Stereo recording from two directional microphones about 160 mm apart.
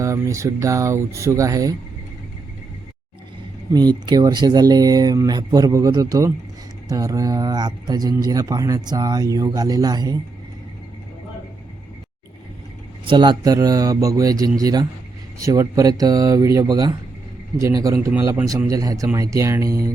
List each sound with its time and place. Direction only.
0.0 s speech: 20° right (ahead or behind)
3.7 s speech: 25° right (ahead or behind)
13.1 s speech: 30° right (ahead or behind)